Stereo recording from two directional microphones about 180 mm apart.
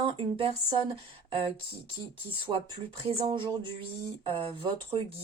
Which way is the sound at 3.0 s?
25° right (ahead or behind).